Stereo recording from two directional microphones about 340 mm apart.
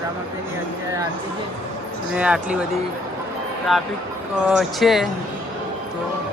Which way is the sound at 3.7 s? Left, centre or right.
Centre.